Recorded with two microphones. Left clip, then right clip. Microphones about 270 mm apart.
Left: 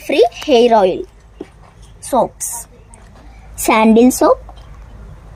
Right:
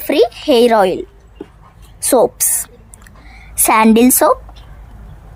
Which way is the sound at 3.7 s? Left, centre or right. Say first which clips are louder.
Even; right.